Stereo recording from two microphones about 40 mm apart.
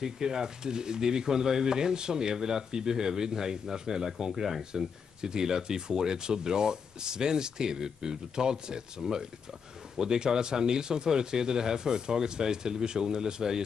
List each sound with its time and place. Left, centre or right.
0.0 s speech: centre